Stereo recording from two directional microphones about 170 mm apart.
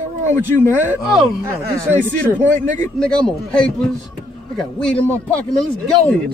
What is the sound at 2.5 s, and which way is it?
Speech, 45° right (ahead or behind).